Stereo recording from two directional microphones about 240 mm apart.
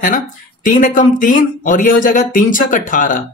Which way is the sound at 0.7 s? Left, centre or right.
Left.